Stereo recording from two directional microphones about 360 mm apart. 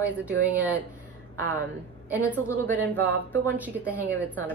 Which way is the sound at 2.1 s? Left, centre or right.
Centre.